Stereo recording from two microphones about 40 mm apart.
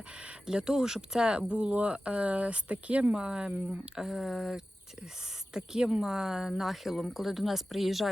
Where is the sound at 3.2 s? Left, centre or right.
Right.